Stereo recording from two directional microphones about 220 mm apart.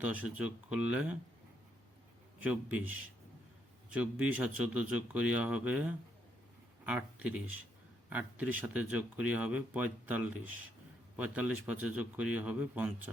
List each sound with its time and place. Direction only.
0.0 s a man's voice: 5° right (ahead or behind)
2.4 s speech: 5° right (ahead or behind)
3.9 s a man's voice: 5° right (ahead or behind)